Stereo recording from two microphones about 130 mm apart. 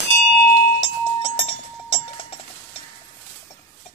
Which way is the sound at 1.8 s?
55° left (ahead or behind).